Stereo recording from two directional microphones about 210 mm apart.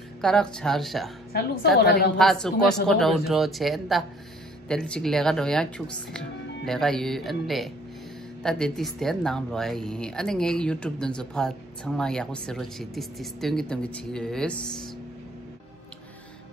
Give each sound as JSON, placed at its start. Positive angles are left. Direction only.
{"t": 0.2, "sound": "speech", "side_deg": 5}
{"t": 1.3, "sound": "a woman's voice", "side_deg": 50}
{"t": 2.1, "sound": "speech", "side_deg": 0}